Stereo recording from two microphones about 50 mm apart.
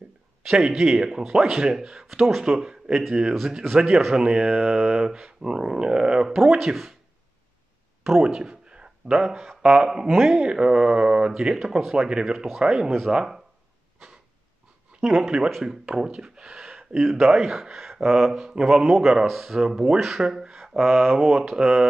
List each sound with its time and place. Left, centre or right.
0.5 s speech: centre
2.0 s a man's voice: centre
8.2 s speech: centre
15.0 s speech: centre
20.2 s speech: centre